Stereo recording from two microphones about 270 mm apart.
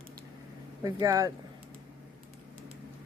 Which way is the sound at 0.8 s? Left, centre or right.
Centre.